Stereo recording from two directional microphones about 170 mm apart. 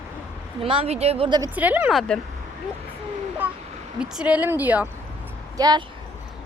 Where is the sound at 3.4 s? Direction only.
10° right (ahead or behind).